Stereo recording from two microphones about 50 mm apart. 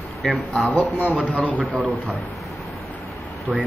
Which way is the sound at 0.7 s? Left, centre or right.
Left.